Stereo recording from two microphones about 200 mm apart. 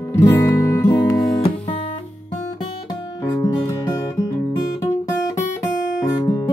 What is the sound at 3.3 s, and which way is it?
Music, 15° left (ahead or behind).